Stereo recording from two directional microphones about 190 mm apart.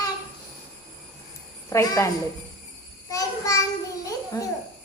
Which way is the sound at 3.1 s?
15° left (ahead or behind).